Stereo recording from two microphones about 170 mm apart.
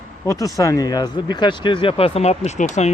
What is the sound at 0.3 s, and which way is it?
Speech, 20° left (ahead or behind).